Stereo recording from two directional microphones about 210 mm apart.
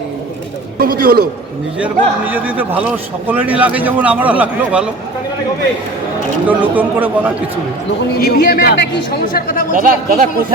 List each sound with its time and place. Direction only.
0.8 s a man's voice: 45° right (ahead or behind)
1.8 s a man's voice: 5° right (ahead or behind)
6.6 s a man's voice: 10° right (ahead or behind)
8.2 s speech: 45° left (ahead or behind)
9.7 s speech: 40° right (ahead or behind)